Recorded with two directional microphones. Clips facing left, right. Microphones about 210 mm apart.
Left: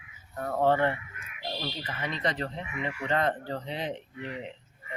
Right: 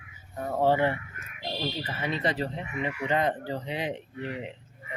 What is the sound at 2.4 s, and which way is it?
Speech, 15° right (ahead or behind).